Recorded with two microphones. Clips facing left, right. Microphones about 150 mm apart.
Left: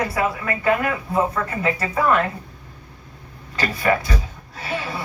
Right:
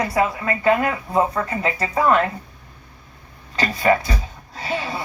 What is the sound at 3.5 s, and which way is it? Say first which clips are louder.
Speech: right 2 dB; 20° right (ahead or behind).